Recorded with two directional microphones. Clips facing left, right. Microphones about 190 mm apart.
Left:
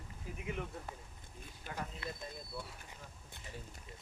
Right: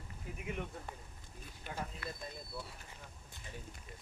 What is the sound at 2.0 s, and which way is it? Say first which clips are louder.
Speech: left 1 dB; 25° left (ahead or behind).